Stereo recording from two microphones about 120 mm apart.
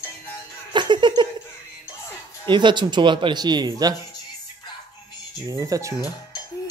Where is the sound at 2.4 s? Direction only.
40° right (ahead or behind).